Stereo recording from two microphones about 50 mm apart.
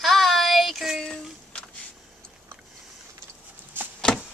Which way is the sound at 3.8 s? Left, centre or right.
Right.